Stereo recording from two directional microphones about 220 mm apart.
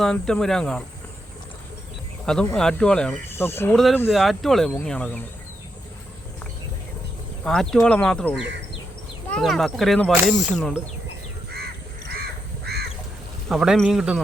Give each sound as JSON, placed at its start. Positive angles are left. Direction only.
{"t": 0.0, "sound": "speech", "side_deg": 5}
{"t": 2.2, "sound": "speech", "side_deg": 5}
{"t": 7.4, "sound": "speech", "side_deg": 0}
{"t": 12.7, "sound": "duck", "side_deg": -45}
{"t": 13.5, "sound": "speech", "side_deg": 0}